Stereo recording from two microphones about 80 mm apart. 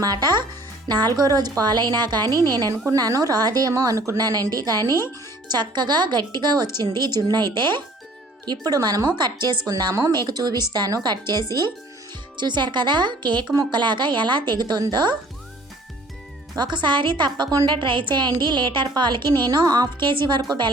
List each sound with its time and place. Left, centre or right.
0.0 s a woman's voice: right
4.2 s a woman's voice: right
4.9 s speech: left
5.5 s a woman's voice: right
8.4 s a woman's voice: right
12.4 s a woman's voice: right
16.6 s a woman's voice: right
17.7 s a woman's voice: right
18.1 s a woman's voice: right
19.5 s a woman's voice: right